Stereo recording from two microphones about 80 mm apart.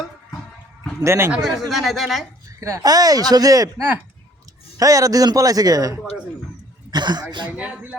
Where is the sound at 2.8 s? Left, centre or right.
Right.